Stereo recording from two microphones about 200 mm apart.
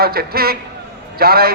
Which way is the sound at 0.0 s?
50° right (ahead or behind).